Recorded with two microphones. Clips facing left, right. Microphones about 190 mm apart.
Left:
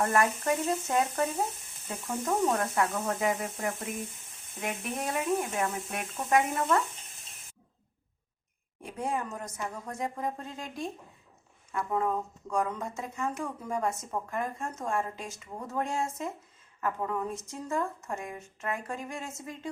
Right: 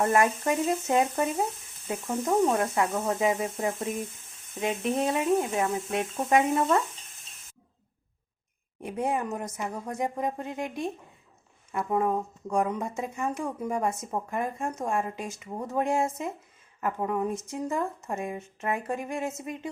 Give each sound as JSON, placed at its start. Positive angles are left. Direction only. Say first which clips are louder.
{"t": 0.0, "sound": "a woman's voice", "louder": "right 3 dB", "side_deg": -20}
{"t": 8.9, "sound": "a woman's voice", "louder": "right 4 dB", "side_deg": -20}